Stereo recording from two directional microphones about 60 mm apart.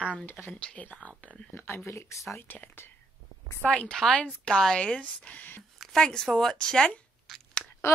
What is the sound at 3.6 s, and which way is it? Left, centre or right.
A woman's voice, centre.